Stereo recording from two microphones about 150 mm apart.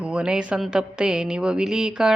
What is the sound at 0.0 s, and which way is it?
A woman's voice, 5° right (ahead or behind).